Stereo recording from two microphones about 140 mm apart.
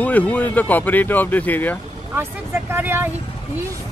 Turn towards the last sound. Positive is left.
turn(degrees=-15)  # may be behind; listen again after turning